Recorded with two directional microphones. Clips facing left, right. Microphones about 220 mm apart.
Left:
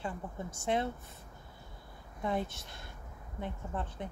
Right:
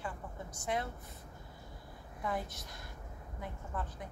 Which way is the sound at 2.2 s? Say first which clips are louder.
Left 4 dB; 25° left (ahead or behind).